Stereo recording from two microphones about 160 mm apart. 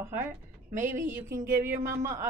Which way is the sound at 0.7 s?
50° right (ahead or behind).